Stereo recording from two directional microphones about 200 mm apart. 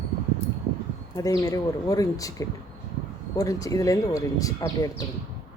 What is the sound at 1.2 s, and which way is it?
Speech, 15° left (ahead or behind).